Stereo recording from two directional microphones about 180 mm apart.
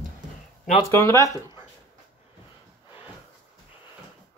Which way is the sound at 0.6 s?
45° left (ahead or behind).